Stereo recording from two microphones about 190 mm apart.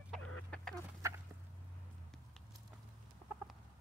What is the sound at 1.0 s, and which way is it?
Fowl, 15° right (ahead or behind).